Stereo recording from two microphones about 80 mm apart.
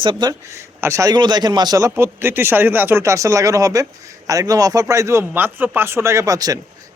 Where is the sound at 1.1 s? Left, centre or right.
Right.